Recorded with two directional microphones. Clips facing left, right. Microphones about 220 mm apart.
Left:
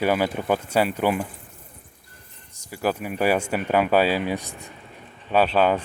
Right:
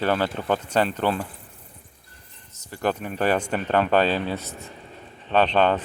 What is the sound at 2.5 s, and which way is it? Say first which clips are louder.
Speech: even; 10° left (ahead or behind).